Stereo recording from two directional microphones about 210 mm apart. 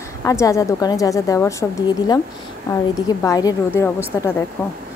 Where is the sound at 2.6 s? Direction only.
15° left (ahead or behind).